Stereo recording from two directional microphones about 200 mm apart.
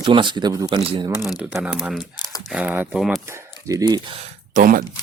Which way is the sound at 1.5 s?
5° right (ahead or behind).